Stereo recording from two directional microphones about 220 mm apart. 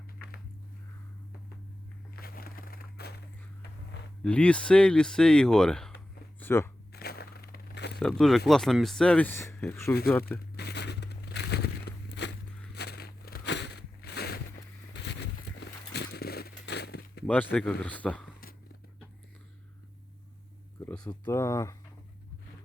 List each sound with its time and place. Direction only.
2.1 s crushing: 40° left (ahead or behind)
4.2 s speech: 5° left (ahead or behind)
6.4 s a sound: 10° left (ahead or behind)
6.9 s crushing: 45° left (ahead or behind)
7.9 s speech: 5° left (ahead or behind)
10.6 s a sound: 50° left (ahead or behind)
17.2 s speech: 5° left (ahead or behind)
21.0 s speech: 15° left (ahead or behind)